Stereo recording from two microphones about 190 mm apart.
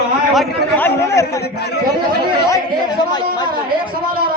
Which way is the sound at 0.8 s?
15° left (ahead or behind).